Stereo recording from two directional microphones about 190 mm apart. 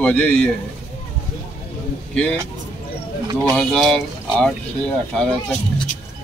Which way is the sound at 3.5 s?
5° left (ahead or behind).